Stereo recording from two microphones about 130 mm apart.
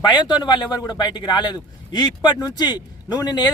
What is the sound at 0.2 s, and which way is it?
A man's voice, 35° left (ahead or behind).